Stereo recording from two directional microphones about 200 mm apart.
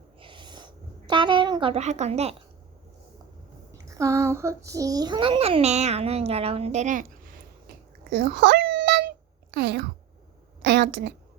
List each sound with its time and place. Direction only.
0.2 s a sound: 25° right (ahead or behind)
3.8 s a child's voice: 15° right (ahead or behind); by 7.3 s 40° right (ahead or behind)
8.1 s babbling: 55° right (ahead or behind)
9.6 s a woman's voice: 60° right (ahead or behind)